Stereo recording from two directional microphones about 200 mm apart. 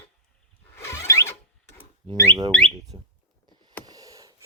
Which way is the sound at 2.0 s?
5° left (ahead or behind).